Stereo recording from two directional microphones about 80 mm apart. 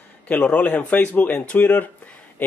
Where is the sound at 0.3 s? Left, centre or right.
Left.